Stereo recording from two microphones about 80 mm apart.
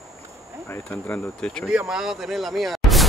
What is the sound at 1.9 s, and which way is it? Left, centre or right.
Speech, centre.